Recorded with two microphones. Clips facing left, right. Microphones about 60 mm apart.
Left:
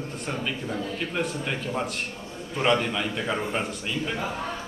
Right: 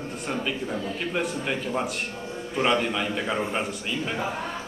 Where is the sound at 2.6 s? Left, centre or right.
Centre.